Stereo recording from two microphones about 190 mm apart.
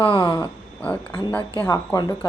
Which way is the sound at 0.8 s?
10° left (ahead or behind).